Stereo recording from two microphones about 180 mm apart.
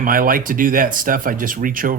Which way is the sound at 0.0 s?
50° right (ahead or behind).